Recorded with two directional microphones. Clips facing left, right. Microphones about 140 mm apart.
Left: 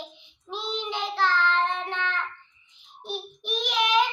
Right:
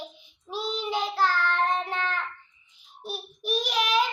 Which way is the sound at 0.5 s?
5° right (ahead or behind).